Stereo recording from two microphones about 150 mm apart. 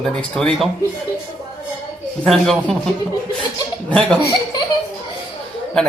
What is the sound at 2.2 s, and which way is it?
Speech, 5° left (ahead or behind).